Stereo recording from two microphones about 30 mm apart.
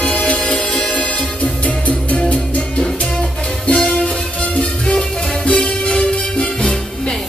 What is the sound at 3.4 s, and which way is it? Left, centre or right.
Music, left.